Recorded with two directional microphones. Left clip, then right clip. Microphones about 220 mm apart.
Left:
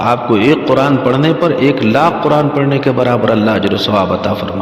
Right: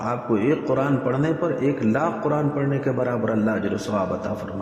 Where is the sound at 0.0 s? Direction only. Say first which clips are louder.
Left 12 dB; 35° left (ahead or behind).